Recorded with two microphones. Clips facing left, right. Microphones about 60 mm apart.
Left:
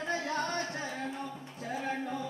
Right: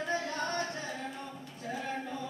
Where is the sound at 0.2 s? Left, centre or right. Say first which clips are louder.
Left 1 dB; left.